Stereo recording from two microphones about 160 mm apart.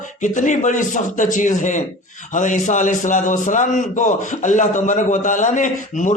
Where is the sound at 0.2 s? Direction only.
50° left (ahead or behind).